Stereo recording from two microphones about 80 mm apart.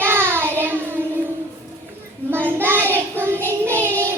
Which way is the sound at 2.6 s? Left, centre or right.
Right.